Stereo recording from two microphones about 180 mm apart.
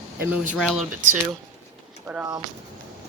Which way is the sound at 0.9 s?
45° right (ahead or behind).